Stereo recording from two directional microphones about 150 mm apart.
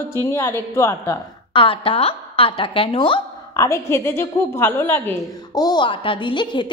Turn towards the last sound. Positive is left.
turn(degrees=30)  # may be behind; listen again after turning